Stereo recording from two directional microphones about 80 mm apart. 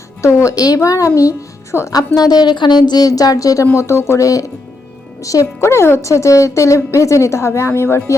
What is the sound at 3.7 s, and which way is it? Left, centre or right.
A woman's voice, left.